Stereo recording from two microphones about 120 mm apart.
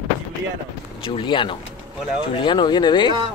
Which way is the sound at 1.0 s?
45° left (ahead or behind).